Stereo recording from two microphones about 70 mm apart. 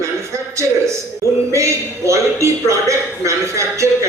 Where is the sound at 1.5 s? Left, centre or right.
Right.